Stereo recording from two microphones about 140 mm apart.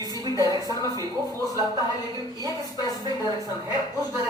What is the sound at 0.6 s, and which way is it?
Speech, 25° left (ahead or behind).